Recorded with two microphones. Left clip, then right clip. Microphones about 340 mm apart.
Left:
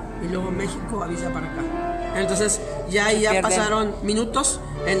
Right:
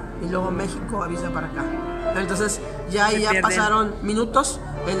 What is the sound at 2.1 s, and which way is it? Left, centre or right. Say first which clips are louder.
Speech: left 2 dB; centre.